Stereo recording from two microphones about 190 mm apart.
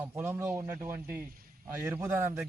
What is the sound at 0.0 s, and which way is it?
A man's voice, 10° right (ahead or behind).